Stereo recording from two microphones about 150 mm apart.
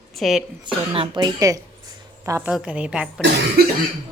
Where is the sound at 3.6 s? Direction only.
90° right.